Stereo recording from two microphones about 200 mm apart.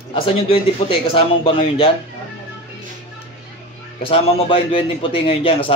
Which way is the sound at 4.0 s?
25° left (ahead or behind).